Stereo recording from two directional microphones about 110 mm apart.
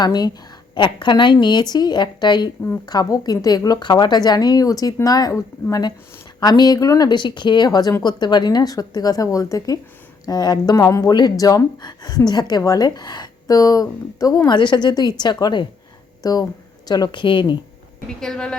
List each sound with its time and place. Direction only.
0.0 s a woman's voice: 40° left (ahead or behind)
18.2 s a woman's voice: 5° left (ahead or behind)